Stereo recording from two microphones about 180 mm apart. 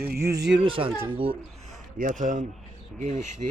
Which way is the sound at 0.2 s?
15° right (ahead or behind).